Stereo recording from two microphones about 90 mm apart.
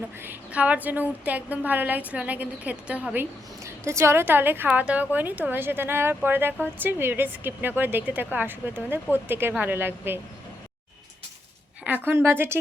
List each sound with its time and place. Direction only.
0.2 s a woman's voice: 20° right (ahead or behind)
3.8 s a woman's voice: 30° right (ahead or behind)
11.9 s a woman's voice: 25° right (ahead or behind)